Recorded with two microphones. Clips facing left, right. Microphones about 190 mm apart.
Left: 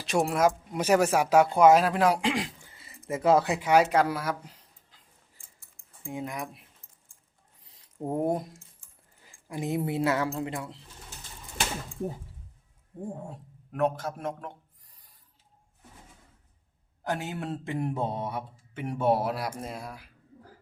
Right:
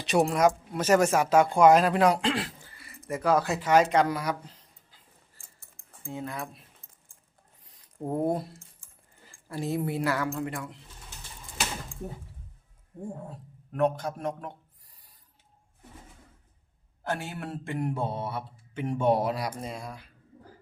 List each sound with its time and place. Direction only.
0.0 s a man's voice: centre (ahead or behind)
6.1 s speech: 15° left (ahead or behind)
8.0 s speech: 10° left (ahead or behind)
9.5 s speech: 15° left (ahead or behind)
13.7 s a man's voice: centre (ahead or behind)
17.0 s speech: 15° left (ahead or behind)